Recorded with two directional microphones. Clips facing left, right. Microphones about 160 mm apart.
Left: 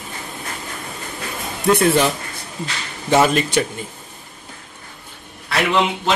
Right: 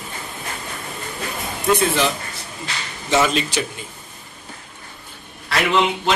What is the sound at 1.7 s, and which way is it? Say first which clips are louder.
Speech: left 4 dB; 55° left (ahead or behind).